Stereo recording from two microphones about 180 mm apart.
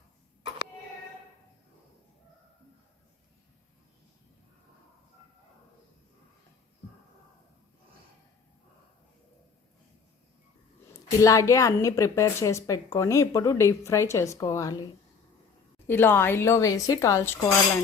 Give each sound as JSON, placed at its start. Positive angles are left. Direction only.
{"t": 11.2, "sound": "a woman's voice", "side_deg": 15}
{"t": 15.9, "sound": "a woman's voice", "side_deg": 10}